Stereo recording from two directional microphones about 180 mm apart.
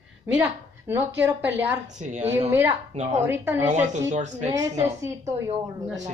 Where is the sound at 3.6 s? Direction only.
40° right (ahead or behind).